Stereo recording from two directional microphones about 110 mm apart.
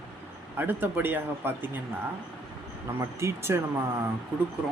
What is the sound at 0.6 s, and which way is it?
Speech, 20° right (ahead or behind).